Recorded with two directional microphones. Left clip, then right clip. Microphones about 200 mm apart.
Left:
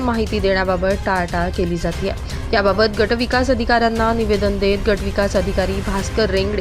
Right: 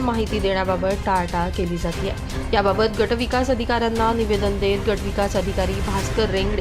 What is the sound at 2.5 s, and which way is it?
A woman's voice, 15° left (ahead or behind).